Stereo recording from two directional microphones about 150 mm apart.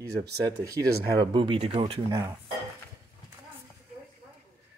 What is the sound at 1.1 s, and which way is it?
Speech, 30° right (ahead or behind).